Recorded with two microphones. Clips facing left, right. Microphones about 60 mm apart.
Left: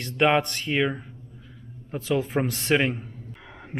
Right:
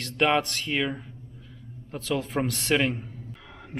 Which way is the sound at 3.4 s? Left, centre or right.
Centre.